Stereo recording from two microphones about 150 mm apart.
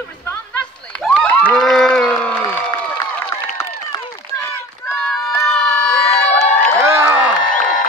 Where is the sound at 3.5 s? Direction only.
20° left (ahead or behind).